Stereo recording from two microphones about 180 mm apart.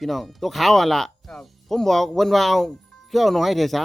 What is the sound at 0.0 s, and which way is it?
Speech, centre (ahead or behind).